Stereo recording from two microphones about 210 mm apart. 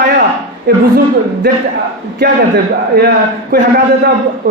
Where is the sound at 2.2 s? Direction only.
50° right (ahead or behind).